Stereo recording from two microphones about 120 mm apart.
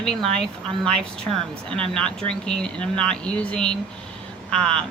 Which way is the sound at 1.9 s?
5° left (ahead or behind).